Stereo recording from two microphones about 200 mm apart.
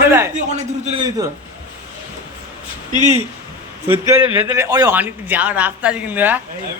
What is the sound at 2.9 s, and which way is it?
Speech, 40° right (ahead or behind).